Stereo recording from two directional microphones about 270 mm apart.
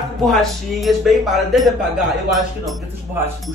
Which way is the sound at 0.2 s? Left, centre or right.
Centre.